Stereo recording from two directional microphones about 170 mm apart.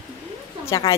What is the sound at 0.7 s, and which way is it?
Speech, 20° left (ahead or behind).